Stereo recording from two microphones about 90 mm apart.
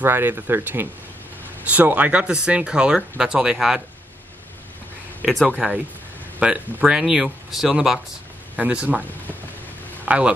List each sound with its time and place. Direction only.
0.0 s speech: 25° right (ahead or behind); by 3.8 s 5° right (ahead or behind)
5.2 s speech: centre (ahead or behind)
6.4 s speech: 10° right (ahead or behind)
8.5 s speech: 15° right (ahead or behind)
10.0 s speech: 15° right (ahead or behind)